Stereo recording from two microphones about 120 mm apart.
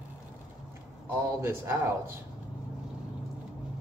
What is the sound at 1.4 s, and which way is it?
Speech, 20° right (ahead or behind).